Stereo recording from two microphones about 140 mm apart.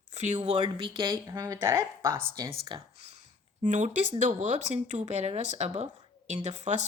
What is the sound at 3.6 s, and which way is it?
A woman's voice, 60° right (ahead or behind).